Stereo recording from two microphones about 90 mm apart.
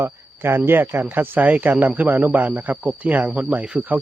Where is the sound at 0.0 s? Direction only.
25° right (ahead or behind).